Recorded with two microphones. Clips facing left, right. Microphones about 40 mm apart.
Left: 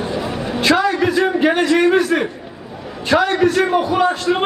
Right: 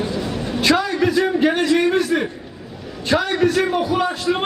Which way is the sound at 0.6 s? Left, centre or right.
Centre.